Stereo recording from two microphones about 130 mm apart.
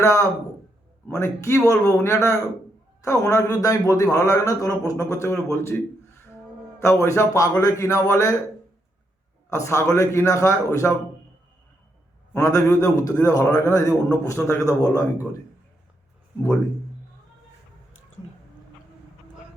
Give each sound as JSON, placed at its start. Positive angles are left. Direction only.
{"t": 0.0, "sound": "speech", "side_deg": 25}
{"t": 6.7, "sound": "speech", "side_deg": 20}
{"t": 9.5, "sound": "speech", "side_deg": 20}
{"t": 12.3, "sound": "speech", "side_deg": 20}